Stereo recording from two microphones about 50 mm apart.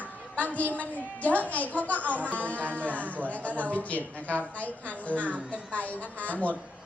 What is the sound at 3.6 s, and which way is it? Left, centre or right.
A woman's voice, left.